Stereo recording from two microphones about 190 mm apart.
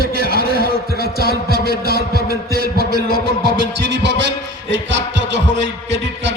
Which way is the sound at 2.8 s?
55° right (ahead or behind).